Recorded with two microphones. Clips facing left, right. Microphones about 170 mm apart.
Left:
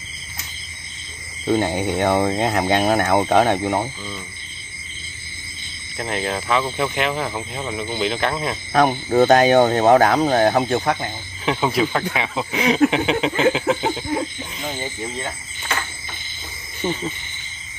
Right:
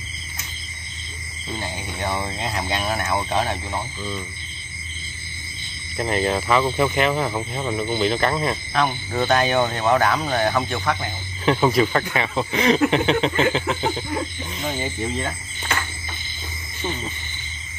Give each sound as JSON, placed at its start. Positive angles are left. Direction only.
{"t": 1.5, "sound": "speech", "side_deg": 60}
{"t": 5.9, "sound": "speech", "side_deg": 0}
{"t": 8.7, "sound": "speech", "side_deg": 45}
{"t": 11.4, "sound": "speech", "side_deg": 0}